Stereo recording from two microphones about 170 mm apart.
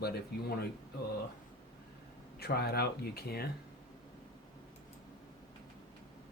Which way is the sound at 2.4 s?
65° left (ahead or behind).